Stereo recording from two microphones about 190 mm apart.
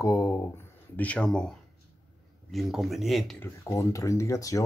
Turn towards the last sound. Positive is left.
turn(degrees=15)  # may be behind; listen again after turning